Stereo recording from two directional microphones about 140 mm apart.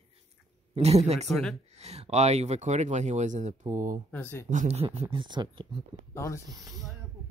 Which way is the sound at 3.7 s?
70° right (ahead or behind).